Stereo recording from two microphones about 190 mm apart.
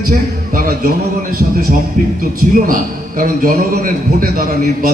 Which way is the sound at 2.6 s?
45° right (ahead or behind).